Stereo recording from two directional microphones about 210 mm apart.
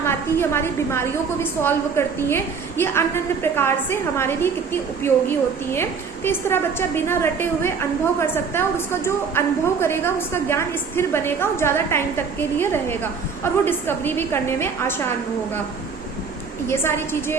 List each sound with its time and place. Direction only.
0.0 s a woman's voice: 10° left (ahead or behind)
16.6 s a woman's voice: 10° left (ahead or behind)